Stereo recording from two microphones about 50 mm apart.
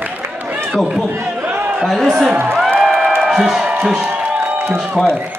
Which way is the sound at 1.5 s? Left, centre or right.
Right.